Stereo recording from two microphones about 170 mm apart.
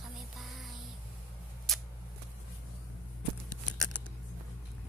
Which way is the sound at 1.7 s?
Centre (ahead or behind).